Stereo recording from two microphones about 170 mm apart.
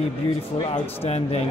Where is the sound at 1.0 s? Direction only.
35° left (ahead or behind).